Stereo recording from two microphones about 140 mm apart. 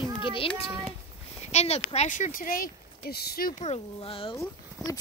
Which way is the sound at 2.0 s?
60° left (ahead or behind).